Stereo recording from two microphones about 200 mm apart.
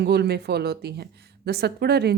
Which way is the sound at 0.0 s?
55° right (ahead or behind).